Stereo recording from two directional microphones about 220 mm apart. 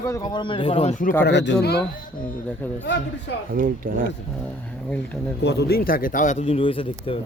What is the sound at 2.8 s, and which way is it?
Speech, 50° left (ahead or behind).